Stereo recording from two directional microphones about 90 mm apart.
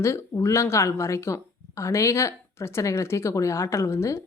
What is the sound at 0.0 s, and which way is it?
Speech, 30° left (ahead or behind).